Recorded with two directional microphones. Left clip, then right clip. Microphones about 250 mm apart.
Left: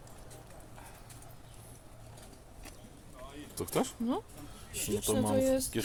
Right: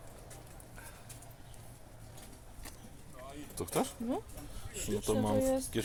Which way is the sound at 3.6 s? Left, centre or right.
Centre.